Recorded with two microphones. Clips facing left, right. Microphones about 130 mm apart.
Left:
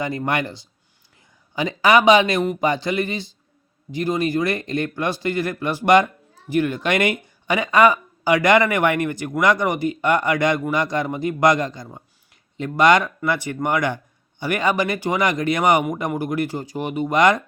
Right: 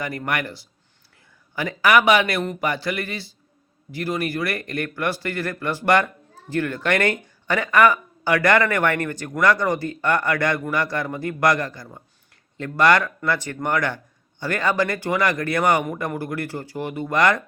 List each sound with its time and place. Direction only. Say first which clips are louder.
0.0 s speech: left 3 dB; 20° left (ahead or behind)